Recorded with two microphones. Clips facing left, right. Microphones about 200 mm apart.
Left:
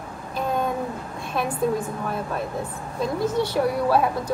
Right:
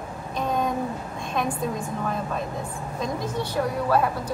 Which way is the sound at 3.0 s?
10° left (ahead or behind).